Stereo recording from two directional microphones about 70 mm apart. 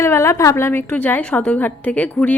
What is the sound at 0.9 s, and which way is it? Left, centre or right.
A woman's voice, left.